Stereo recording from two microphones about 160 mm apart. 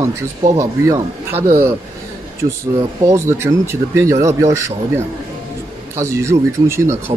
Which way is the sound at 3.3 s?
15° right (ahead or behind).